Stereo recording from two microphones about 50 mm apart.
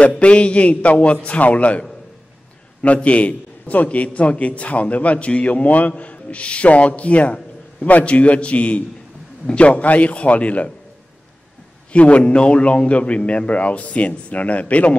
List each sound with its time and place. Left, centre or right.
0.2 s a man's voice: left
11.9 s a man's voice: left